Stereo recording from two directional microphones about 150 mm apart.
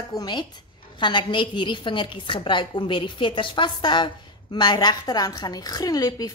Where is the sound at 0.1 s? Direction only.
30° left (ahead or behind).